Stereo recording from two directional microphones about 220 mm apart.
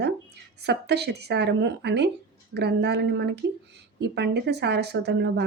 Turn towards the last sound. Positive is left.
turn(degrees=-50)  # may be behind; listen again after turning